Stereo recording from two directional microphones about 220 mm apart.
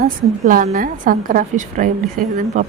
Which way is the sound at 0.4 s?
35° right (ahead or behind).